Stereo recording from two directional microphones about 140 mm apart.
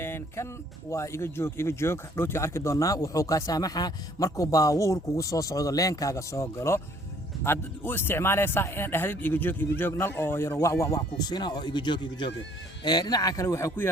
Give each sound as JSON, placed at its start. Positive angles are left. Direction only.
{"t": 0.0, "sound": "music", "side_deg": 15}
{"t": 0.9, "sound": "speech", "side_deg": 20}